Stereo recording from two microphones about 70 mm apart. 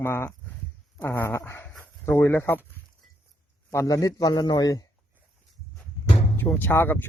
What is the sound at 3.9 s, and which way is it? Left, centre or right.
Speech, left.